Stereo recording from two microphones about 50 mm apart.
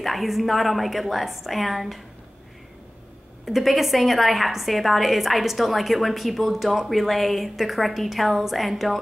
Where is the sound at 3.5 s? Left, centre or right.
Centre.